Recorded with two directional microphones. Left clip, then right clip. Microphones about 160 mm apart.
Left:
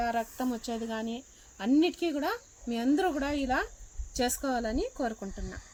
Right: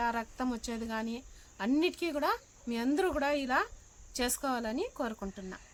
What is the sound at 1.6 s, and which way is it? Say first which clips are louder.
Speech: left 4 dB; 30° right (ahead or behind).